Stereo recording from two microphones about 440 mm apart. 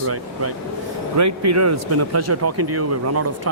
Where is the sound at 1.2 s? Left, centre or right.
Right.